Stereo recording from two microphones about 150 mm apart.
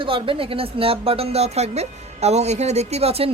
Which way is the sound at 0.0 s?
35° right (ahead or behind).